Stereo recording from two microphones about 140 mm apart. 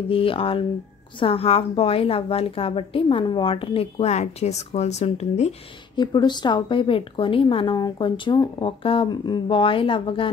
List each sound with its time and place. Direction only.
0.1 s a woman's voice: 40° left (ahead or behind)
5.9 s a woman's voice: 30° left (ahead or behind)